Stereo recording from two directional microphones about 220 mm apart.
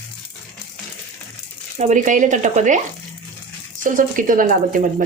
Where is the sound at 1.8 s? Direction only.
35° right (ahead or behind).